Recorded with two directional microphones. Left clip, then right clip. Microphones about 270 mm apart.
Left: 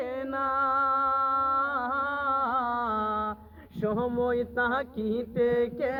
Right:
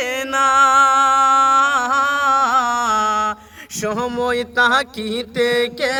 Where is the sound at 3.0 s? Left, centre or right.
Centre.